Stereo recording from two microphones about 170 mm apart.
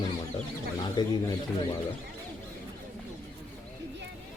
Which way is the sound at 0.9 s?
25° left (ahead or behind).